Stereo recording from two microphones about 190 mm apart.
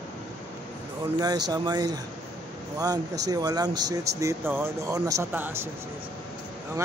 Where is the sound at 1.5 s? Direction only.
20° right (ahead or behind).